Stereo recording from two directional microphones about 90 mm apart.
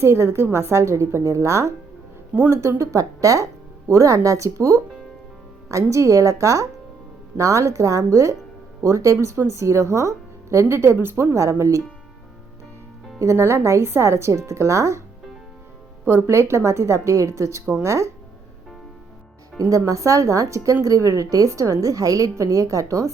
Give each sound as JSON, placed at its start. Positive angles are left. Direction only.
{"t": 0.0, "sound": "speech", "side_deg": -30}
{"t": 13.1, "sound": "speech", "side_deg": -30}
{"t": 16.0, "sound": "speech", "side_deg": -25}
{"t": 19.7, "sound": "speech", "side_deg": -35}